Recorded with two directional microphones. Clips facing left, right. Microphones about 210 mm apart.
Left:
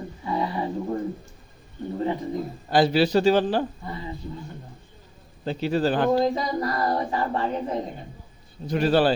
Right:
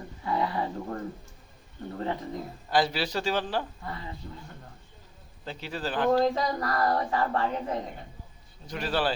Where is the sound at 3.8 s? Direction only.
15° left (ahead or behind).